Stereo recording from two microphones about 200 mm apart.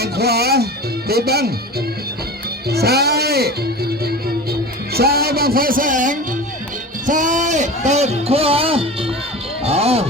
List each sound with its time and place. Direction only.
0.0 s speech: 50° right (ahead or behind)
2.6 s speech: 55° right (ahead or behind)
4.9 s a man's voice: 50° right (ahead or behind); by 10.1 s 30° right (ahead or behind)